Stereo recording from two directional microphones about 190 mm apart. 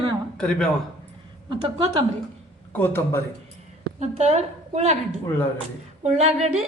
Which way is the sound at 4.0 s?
35° right (ahead or behind).